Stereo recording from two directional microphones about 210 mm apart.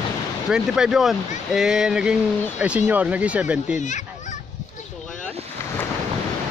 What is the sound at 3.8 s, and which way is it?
Fowl, 35° left (ahead or behind).